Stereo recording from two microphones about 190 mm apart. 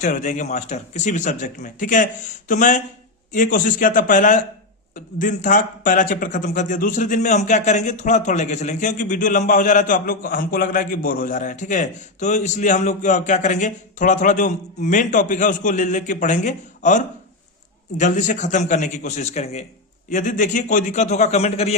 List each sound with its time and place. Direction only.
0.0 s a man's voice: 40° left (ahead or behind)